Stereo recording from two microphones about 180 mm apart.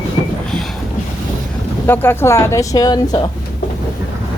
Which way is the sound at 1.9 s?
15° left (ahead or behind).